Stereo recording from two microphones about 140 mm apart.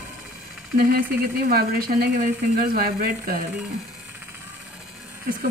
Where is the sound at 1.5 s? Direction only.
90° right.